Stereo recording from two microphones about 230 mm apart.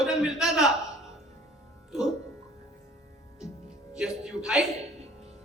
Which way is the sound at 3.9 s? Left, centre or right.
Centre.